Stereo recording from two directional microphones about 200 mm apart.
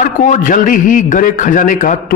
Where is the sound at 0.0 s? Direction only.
40° left (ahead or behind).